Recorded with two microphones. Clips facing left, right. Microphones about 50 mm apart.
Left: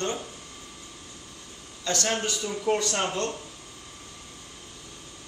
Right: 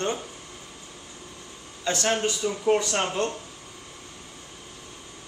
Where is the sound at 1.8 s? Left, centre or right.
Centre.